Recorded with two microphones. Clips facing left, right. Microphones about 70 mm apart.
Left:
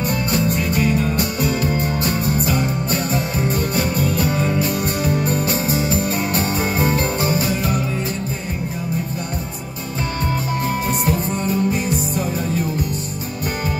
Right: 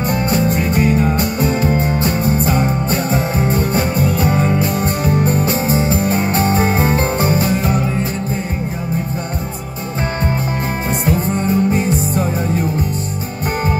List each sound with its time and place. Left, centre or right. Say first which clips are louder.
0.1 s music: right 5 dB; right
11.1 s music: right 4 dB; right